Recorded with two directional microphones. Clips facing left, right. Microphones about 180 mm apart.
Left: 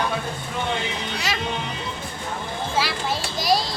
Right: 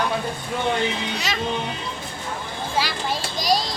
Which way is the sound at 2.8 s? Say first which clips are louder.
Right 1 dB; 5° left (ahead or behind).